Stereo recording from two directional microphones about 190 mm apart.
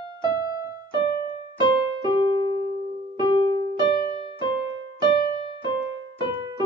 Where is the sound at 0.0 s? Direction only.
25° right (ahead or behind).